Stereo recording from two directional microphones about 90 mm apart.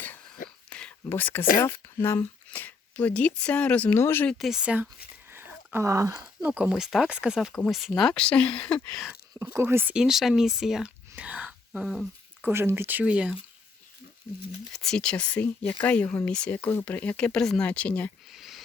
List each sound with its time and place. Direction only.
0.7 s whispering: 10° left (ahead or behind)
1.0 s speech: 25° left (ahead or behind)
4.3 s speech: centre (ahead or behind)
5.3 s a sound: 25° right (ahead or behind)
6.4 s speech: 15° right (ahead or behind)
7.5 s speech: 10° left (ahead or behind)
9.4 s speech: 30° right (ahead or behind)
9.9 s speech: 5° right (ahead or behind)
11.1 s whispering: 15° right (ahead or behind)
12.4 s speech: 25° right (ahead or behind)
14.7 s speech: 5° left (ahead or behind)
18.3 s a sound: 5° right (ahead or behind)